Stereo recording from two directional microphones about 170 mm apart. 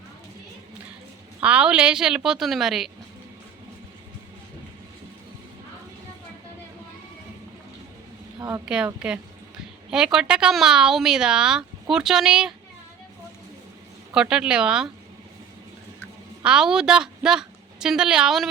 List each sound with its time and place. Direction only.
1.4 s speech: 5° right (ahead or behind)
8.4 s a sound: 15° right (ahead or behind)
8.6 s speech: 5° right (ahead or behind)
14.1 s speech: 5° right (ahead or behind)
16.4 s a woman's voice: 5° right (ahead or behind)